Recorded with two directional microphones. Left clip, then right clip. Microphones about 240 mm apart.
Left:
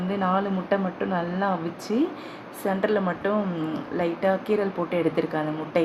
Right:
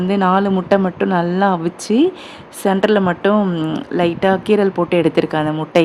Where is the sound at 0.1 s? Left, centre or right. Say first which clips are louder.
Right 9 dB; right.